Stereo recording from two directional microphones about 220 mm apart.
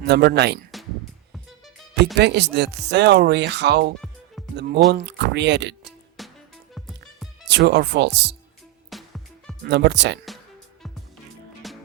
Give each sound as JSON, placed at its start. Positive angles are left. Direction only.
{"t": 0.0, "sound": "speech", "side_deg": -50}
{"t": 2.1, "sound": "speech", "side_deg": -50}
{"t": 4.4, "sound": "music", "side_deg": 0}
{"t": 4.9, "sound": "speech", "side_deg": -50}
{"t": 6.2, "sound": "music", "side_deg": 0}
{"t": 7.4, "sound": "speech", "side_deg": -50}
{"t": 8.9, "sound": "music", "side_deg": 0}
{"t": 9.6, "sound": "speech", "side_deg": -50}
{"t": 11.6, "sound": "music", "side_deg": 0}